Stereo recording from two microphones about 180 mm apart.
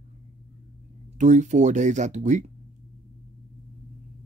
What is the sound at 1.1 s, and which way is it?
A man's voice, 40° right (ahead or behind).